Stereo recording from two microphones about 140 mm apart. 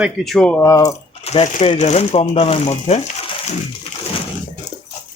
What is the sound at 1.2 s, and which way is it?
Speech, 50° left (ahead or behind).